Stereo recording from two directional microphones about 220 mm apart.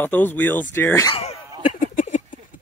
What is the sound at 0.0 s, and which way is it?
Speech, 10° left (ahead or behind).